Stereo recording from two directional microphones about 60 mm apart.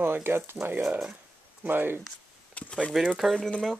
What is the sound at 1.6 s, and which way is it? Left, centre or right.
Speech, right.